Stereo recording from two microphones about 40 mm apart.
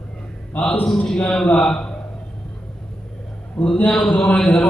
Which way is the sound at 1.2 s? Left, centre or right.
Left.